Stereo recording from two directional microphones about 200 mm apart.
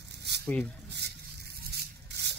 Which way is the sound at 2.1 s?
55° right (ahead or behind).